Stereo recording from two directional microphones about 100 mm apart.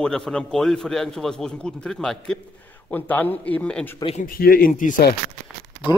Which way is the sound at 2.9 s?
20° left (ahead or behind).